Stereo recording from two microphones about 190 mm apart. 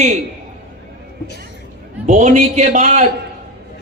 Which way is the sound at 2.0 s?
40° right (ahead or behind).